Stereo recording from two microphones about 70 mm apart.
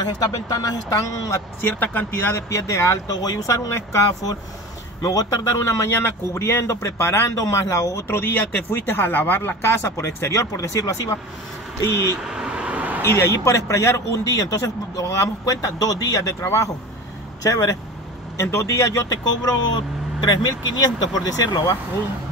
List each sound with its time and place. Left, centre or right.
0.0 s speech: left
1.6 s speech: left
2.5 s a man's voice: left
3.1 s a man's voice: left
7.3 s a man's voice: left
8.2 s speech: left
12.2 s vehicle: centre
13.0 s a man's voice: left
18.4 s a man's voice: left
19.4 s speech: left